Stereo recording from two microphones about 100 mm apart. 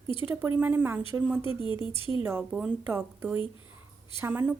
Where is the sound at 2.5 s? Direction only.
15° right (ahead or behind).